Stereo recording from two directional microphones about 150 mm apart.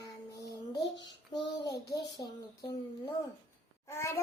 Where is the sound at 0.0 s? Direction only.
20° left (ahead or behind).